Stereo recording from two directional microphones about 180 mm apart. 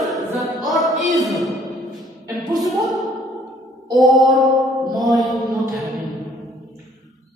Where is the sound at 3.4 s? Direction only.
20° right (ahead or behind).